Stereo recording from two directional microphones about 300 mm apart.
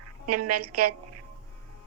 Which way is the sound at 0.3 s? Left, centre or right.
Right.